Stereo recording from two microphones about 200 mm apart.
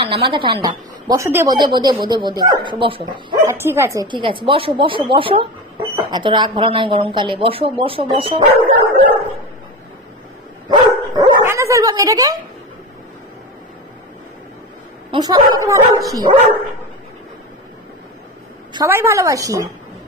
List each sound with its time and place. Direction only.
0.0 s a woman's voice: 25° right (ahead or behind)
10.7 s dog: 15° right (ahead or behind)
15.0 s a woman's voice: 20° right (ahead or behind)
18.7 s a woman's voice: 15° right (ahead or behind)